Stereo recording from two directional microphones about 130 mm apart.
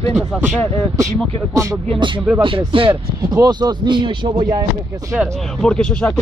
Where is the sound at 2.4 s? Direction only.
40° right (ahead or behind).